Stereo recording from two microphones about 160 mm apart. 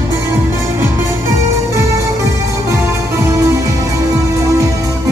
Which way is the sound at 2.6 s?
15° right (ahead or behind).